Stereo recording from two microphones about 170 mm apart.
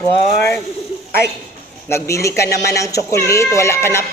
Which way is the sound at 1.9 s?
15° left (ahead or behind).